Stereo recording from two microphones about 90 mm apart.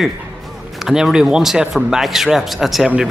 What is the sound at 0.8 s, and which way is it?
Speech, 5° right (ahead or behind).